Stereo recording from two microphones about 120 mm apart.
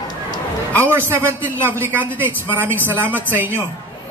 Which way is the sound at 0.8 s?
20° right (ahead or behind).